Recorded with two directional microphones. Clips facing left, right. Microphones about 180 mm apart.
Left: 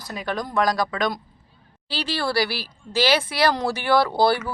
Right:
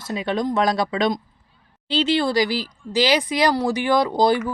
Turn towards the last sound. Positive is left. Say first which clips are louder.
# right 2 dB
turn(degrees=-15)  # may be behind; listen again after turning